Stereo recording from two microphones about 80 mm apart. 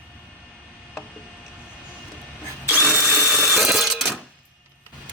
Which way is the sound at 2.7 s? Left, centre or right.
Right.